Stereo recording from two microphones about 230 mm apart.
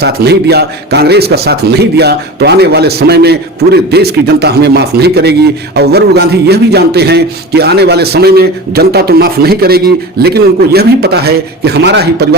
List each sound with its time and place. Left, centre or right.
0.0 s a man's voice: right